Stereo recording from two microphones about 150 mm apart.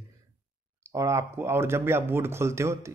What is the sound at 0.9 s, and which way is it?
Speech, 20° right (ahead or behind).